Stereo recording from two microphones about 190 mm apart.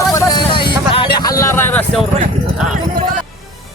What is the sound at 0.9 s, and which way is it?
Vehicle, 25° left (ahead or behind).